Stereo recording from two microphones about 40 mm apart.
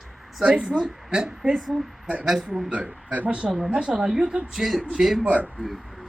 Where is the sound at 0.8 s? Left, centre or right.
Right.